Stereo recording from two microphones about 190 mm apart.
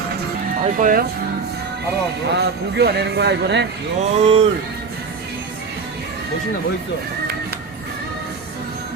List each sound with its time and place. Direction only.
0.6 s speech: 45° right (ahead or behind)
2.3 s speech: 60° right (ahead or behind)
4.0 s speech: 35° right (ahead or behind)